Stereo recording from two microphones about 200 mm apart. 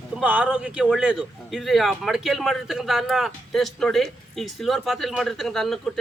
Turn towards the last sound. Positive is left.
turn(degrees=0)  # may be behind; listen again after turning